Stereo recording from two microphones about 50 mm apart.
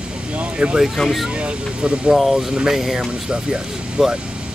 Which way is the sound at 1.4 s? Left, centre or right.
Right.